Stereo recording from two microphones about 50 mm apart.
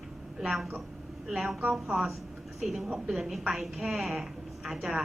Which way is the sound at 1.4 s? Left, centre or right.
Right.